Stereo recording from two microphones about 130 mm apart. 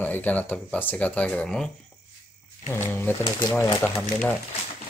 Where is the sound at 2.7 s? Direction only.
15° left (ahead or behind).